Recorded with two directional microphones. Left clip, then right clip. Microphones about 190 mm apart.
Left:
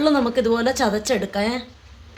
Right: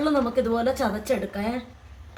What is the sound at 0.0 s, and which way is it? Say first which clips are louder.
A woman's voice: left 4 dB; 35° left (ahead or behind).